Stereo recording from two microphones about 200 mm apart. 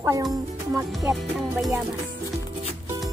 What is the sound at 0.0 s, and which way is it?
Speech, 15° right (ahead or behind).